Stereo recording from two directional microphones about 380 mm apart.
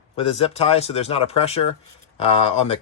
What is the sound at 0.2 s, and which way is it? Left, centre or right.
Speech, centre.